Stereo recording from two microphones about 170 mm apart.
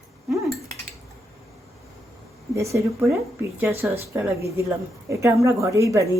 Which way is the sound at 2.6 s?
15° right (ahead or behind).